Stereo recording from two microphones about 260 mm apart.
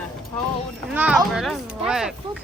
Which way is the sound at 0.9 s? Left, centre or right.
Centre.